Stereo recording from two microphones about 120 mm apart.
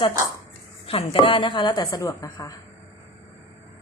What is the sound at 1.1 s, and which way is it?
A woman's voice, 45° left (ahead or behind).